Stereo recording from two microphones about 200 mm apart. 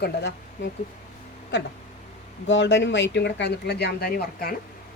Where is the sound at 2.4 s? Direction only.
65° left (ahead or behind).